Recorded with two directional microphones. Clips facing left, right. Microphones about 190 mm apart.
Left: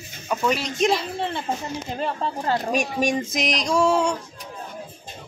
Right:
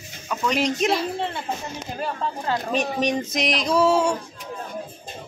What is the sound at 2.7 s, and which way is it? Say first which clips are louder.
Speech: even; 10° left (ahead or behind).